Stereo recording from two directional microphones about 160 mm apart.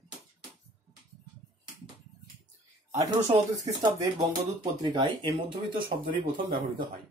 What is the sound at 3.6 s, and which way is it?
Speech, 25° right (ahead or behind).